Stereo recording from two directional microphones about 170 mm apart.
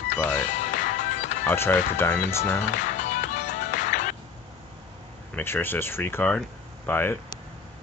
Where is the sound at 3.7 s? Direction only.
45° left (ahead or behind).